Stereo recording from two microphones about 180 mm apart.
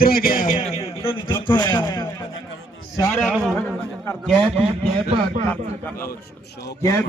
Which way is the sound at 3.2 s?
Centre (ahead or behind).